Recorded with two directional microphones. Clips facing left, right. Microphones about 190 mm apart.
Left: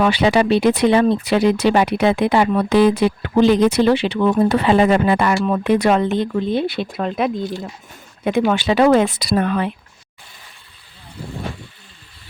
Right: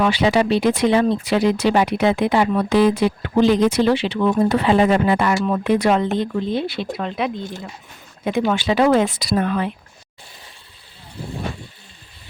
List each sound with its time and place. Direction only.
0.0 s speech: 60° left (ahead or behind); by 7.4 s 45° left (ahead or behind)
8.2 s speech: 65° left (ahead or behind)